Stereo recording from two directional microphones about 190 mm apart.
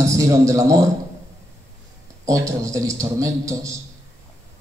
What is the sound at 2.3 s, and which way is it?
A man's voice, 15° right (ahead or behind).